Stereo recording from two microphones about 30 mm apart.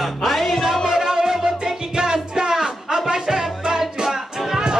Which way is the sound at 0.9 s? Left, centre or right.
Centre.